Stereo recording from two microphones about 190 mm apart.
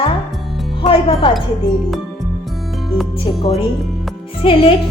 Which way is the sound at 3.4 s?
30° left (ahead or behind).